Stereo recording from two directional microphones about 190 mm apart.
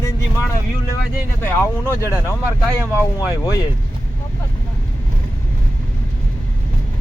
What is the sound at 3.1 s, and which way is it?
Speech, 20° left (ahead or behind).